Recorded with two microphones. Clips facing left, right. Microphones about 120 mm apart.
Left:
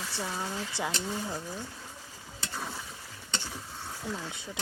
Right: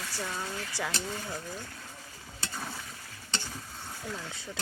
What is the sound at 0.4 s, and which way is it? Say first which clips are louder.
Speech: left 2 dB; 20° left (ahead or behind).